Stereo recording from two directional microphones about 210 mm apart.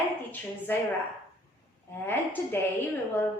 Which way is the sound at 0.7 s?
10° left (ahead or behind).